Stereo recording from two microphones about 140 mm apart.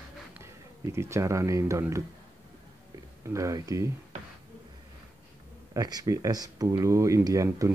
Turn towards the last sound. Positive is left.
turn(degrees=-20)  # may be behind; listen again after turning